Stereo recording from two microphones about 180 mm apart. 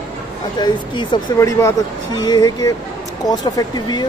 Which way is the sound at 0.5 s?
25° left (ahead or behind).